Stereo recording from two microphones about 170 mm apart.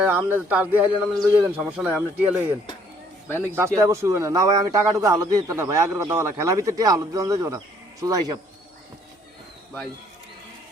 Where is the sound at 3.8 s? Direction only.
15° right (ahead or behind).